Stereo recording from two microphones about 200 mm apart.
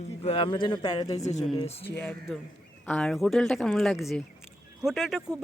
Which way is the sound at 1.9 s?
5° left (ahead or behind).